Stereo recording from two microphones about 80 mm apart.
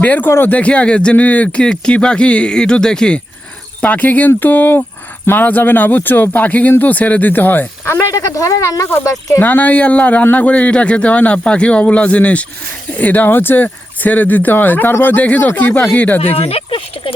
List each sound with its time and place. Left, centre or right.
0.0 s a man's voice: centre
0.3 s a man's voice: left
0.5 s speech: centre
3.8 s a man's voice: centre
9.5 s a man's voice: left